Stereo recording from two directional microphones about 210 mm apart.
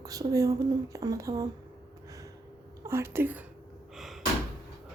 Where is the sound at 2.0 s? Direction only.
15° right (ahead or behind).